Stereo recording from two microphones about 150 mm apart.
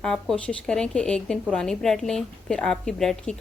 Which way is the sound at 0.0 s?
5° left (ahead or behind).